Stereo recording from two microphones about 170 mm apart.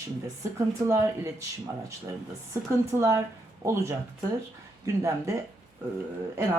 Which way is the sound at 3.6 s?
15° right (ahead or behind).